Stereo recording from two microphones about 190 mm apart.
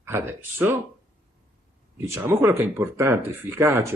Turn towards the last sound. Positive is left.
turn(degrees=-15)  # may be behind; listen again after turning